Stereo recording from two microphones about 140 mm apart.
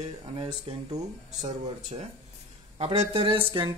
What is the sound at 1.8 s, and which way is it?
Speech, 55° right (ahead or behind).